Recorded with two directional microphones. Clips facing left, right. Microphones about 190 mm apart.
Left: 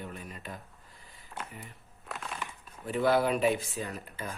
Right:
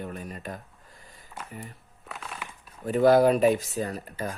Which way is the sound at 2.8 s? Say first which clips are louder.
Right 8 dB; 40° right (ahead or behind).